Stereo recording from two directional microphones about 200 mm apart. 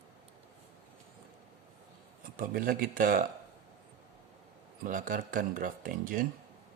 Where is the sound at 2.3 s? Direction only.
45° right (ahead or behind).